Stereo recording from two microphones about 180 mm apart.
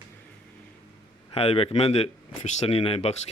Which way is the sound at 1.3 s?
35° left (ahead or behind).